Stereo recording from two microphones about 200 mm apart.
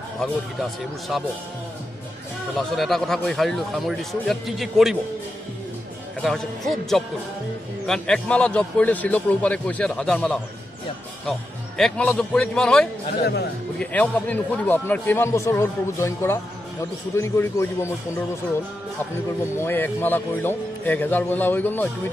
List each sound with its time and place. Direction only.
0.2 s a man's voice: centre (ahead or behind)
2.5 s a man's voice: centre (ahead or behind)
6.2 s a man's voice: centre (ahead or behind)
13.2 s speech: 55° left (ahead or behind)
13.7 s speech: 5° left (ahead or behind)
19.5 s speech: 10° left (ahead or behind)